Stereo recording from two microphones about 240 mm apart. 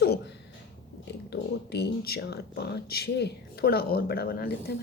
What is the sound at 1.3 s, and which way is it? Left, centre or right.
A woman's voice, left.